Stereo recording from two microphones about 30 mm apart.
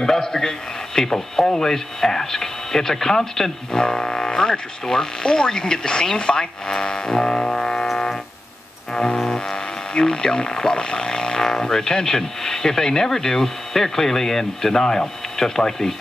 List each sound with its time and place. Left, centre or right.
0.0 s speech: centre
3.8 s speech: left
8.9 s music: left
9.2 s music: centre
9.9 s speech: left